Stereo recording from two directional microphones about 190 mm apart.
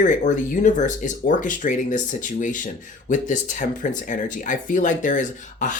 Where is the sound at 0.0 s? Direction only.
40° left (ahead or behind).